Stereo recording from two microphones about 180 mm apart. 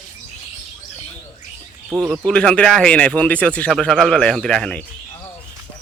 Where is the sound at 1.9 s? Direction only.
5° right (ahead or behind).